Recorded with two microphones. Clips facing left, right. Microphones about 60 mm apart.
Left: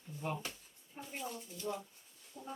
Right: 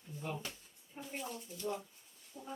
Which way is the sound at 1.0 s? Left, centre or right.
Centre.